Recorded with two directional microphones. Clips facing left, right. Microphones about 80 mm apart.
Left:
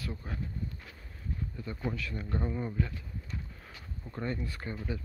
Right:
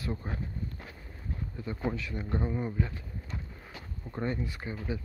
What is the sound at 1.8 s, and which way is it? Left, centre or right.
Speech, right.